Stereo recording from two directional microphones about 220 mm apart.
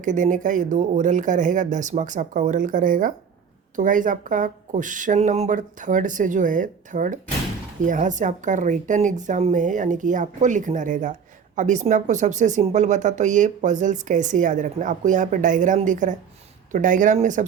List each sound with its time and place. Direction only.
0.0 s speech: 35° right (ahead or behind)